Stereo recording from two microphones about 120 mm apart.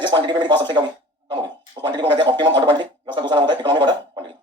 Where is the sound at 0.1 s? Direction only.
40° right (ahead or behind).